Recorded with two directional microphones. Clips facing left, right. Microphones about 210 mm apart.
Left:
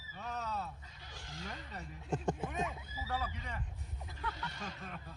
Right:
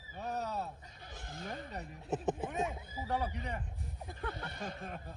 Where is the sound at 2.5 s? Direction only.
30° right (ahead or behind).